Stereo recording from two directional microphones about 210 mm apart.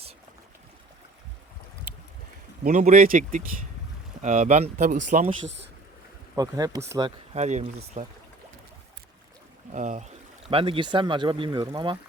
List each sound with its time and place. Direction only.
2.6 s speech: 35° right (ahead or behind)
6.3 s speech: 15° right (ahead or behind)
7.3 s speech: 30° right (ahead or behind)
9.7 s speech: 35° right (ahead or behind)
10.5 s speech: 25° right (ahead or behind)